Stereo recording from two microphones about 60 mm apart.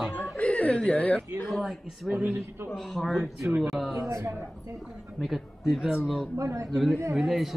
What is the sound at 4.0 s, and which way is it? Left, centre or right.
Speech, right.